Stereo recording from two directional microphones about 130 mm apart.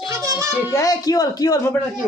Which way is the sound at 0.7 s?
25° left (ahead or behind).